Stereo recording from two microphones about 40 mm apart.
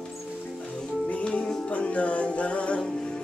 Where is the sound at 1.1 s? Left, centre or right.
Left.